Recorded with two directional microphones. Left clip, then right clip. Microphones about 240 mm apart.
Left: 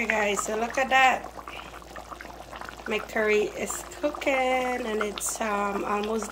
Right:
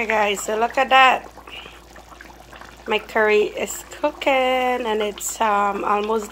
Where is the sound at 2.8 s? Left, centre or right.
Centre.